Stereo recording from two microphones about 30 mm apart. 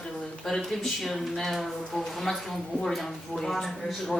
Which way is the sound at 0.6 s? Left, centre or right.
Centre.